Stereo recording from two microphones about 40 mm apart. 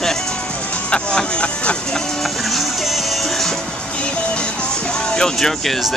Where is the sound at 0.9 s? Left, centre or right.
Left.